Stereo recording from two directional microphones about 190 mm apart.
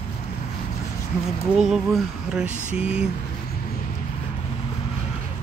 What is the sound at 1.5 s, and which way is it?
Speech, centre (ahead or behind).